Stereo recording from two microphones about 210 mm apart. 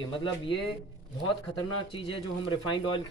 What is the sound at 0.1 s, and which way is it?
Speech, 25° left (ahead or behind).